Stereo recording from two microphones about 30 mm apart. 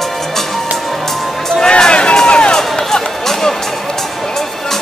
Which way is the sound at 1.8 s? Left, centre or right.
Left.